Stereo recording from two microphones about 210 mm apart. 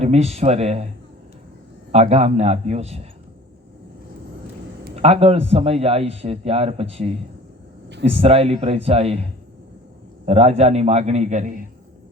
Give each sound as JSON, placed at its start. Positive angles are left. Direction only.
{"t": 0.0, "sound": "a man's voice", "side_deg": -30}
{"t": 1.9, "sound": "a man's voice", "side_deg": -30}
{"t": 4.9, "sound": "a man's voice", "side_deg": -30}